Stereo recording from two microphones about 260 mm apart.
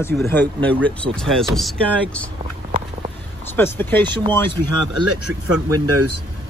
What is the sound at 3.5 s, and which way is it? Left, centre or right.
Speech, centre.